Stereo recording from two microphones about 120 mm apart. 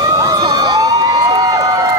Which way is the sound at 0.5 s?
35° right (ahead or behind).